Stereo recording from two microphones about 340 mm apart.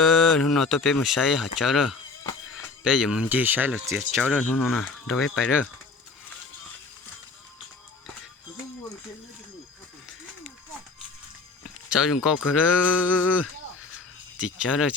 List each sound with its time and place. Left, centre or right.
0.0 s speech: centre
11.9 s speech: centre
14.6 s speech: centre